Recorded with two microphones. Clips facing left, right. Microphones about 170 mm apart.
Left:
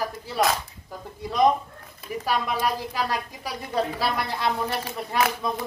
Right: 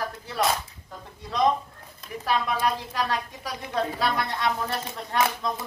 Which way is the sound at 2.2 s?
5° left (ahead or behind).